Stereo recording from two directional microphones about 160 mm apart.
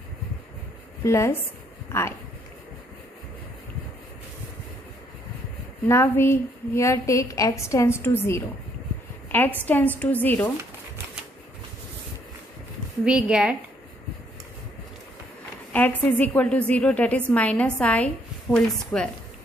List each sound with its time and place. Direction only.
1.0 s a woman's voice: 20° left (ahead or behind)
5.9 s a woman's voice: 15° left (ahead or behind)
13.0 s a woman's voice: 5° right (ahead or behind)
15.7 s a woman's voice: 10° left (ahead or behind)